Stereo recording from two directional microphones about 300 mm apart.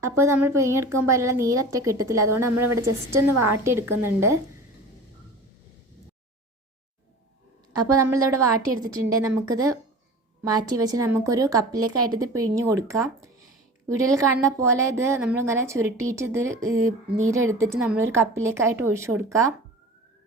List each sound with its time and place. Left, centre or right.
0.0 s a woman's voice: centre
2.6 s a woman's voice: right
3.6 s a woman's voice: centre
8.1 s a woman's voice: centre
10.8 s a woman's voice: centre
11.8 s a woman's voice: right
12.2 s a woman's voice: centre